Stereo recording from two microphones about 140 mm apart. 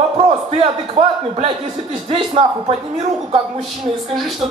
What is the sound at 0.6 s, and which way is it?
Speech, 45° right (ahead or behind).